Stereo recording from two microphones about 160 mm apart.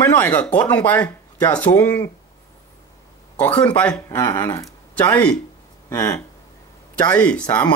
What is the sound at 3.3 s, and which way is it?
Speech, 10° left (ahead or behind).